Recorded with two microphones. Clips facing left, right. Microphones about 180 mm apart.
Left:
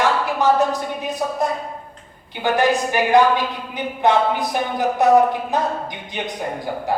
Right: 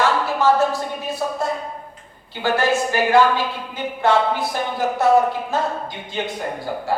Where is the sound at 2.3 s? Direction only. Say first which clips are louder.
Left 1 dB; 15° left (ahead or behind).